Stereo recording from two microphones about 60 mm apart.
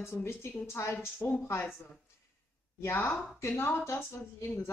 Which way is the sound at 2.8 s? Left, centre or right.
Left.